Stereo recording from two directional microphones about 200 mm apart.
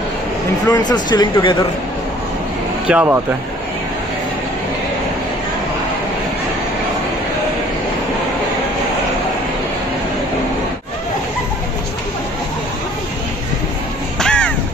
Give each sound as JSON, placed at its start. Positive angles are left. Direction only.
{"t": 0.7, "sound": "speech", "side_deg": 20}
{"t": 2.9, "sound": "speech", "side_deg": -10}
{"t": 14.2, "sound": "crow", "side_deg": 5}